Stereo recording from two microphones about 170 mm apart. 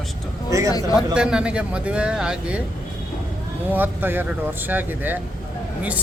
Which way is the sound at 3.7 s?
10° right (ahead or behind).